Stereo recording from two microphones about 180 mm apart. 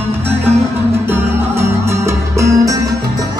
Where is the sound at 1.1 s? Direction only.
15° right (ahead or behind).